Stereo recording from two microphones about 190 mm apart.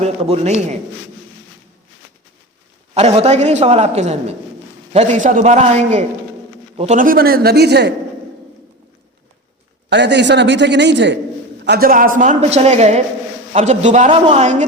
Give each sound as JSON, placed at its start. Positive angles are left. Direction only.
{"t": 0.0, "sound": "a woman's voice", "side_deg": -35}
{"t": 2.9, "sound": "a woman's voice", "side_deg": -35}
{"t": 9.9, "sound": "a man's voice", "side_deg": -65}
{"t": 11.6, "sound": "a woman's voice", "side_deg": -55}